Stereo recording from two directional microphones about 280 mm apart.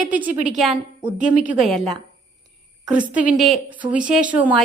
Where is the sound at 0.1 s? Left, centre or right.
Centre.